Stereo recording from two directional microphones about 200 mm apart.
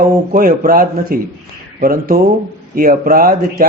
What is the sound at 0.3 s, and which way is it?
Speech, 45° right (ahead or behind).